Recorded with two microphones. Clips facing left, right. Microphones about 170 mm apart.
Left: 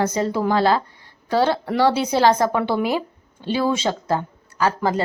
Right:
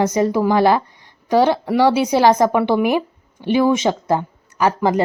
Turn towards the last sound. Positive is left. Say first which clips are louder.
# right 4 dB
turn(degrees=-15)  # may be behind; listen again after turning